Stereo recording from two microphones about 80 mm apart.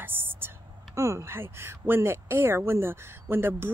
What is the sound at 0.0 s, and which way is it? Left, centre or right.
A woman's voice, right.